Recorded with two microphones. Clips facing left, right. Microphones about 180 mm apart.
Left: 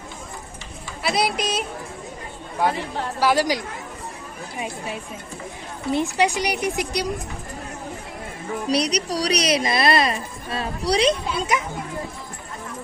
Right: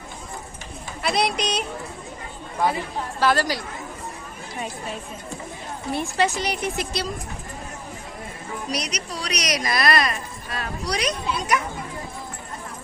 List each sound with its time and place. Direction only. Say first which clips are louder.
1.0 s speech: even; 5° left (ahead or behind)
3.2 s speech: left 2 dB; 15° left (ahead or behind)
5.9 s speech: left 3 dB; 15° left (ahead or behind)
8.7 s a woman's voice: left 9 dB; 35° left (ahead or behind)